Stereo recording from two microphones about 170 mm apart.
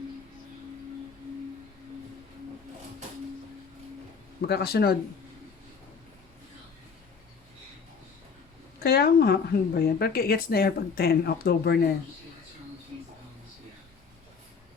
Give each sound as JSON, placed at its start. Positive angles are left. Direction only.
{"t": 4.4, "sound": "speech", "side_deg": 70}
{"t": 8.8, "sound": "speech", "side_deg": 65}